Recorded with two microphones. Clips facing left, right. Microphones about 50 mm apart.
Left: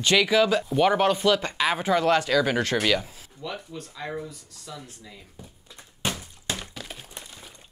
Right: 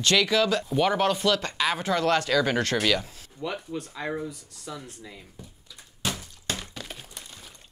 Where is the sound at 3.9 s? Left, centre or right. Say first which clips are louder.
Even; centre.